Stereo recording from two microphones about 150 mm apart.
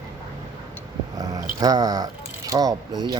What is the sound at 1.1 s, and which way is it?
Speech, 25° right (ahead or behind).